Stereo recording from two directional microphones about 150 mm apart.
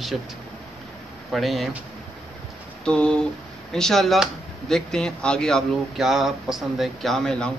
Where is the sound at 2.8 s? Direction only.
5° left (ahead or behind).